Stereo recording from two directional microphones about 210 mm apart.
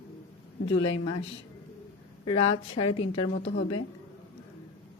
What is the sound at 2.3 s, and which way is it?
A woman's voice, 30° left (ahead or behind).